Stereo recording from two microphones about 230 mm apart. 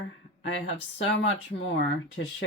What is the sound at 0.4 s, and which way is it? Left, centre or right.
Speech, left.